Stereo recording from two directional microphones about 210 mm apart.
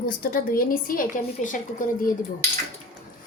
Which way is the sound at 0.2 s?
45° left (ahead or behind).